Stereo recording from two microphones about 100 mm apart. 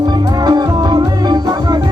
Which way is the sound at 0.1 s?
45° right (ahead or behind).